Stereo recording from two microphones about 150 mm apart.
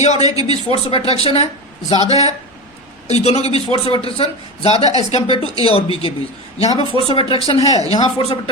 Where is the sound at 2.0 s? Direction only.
25° right (ahead or behind).